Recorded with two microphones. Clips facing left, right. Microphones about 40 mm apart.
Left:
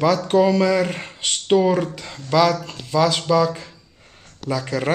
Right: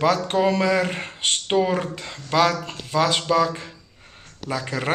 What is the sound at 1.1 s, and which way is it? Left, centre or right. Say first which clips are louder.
Speech: right 2 dB; right.